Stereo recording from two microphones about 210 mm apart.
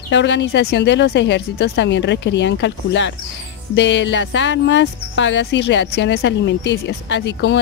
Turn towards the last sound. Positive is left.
turn(degrees=55)  # may be behind; listen again after turning